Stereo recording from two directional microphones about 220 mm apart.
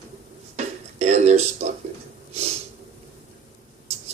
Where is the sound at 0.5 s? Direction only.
30° right (ahead or behind).